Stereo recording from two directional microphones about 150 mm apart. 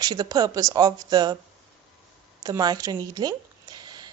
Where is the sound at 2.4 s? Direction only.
25° right (ahead or behind).